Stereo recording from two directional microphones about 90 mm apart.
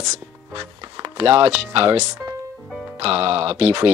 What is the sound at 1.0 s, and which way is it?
Speech, 90° right.